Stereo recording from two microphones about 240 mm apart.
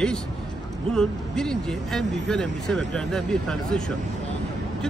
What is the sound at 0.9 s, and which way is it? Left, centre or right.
Speech, centre.